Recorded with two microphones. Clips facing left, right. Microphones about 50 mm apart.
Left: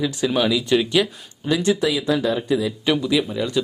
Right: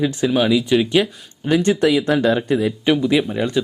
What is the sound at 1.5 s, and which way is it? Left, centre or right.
Speech, right.